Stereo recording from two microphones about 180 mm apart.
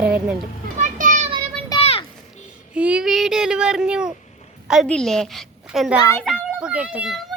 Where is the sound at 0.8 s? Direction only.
45° right (ahead or behind).